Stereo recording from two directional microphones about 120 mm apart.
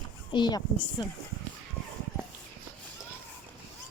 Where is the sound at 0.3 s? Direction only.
40° left (ahead or behind).